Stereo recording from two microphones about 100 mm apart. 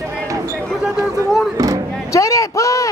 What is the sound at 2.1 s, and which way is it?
Speech, 30° left (ahead or behind).